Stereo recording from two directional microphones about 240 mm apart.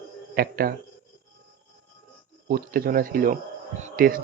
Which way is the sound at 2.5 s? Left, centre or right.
Right.